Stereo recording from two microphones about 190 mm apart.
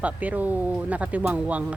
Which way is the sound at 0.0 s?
10° right (ahead or behind).